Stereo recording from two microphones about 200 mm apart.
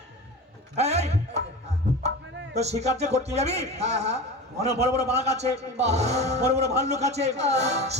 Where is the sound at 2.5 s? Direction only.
35° right (ahead or behind).